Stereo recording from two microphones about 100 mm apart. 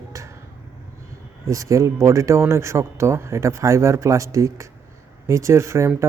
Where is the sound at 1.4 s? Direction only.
30° right (ahead or behind).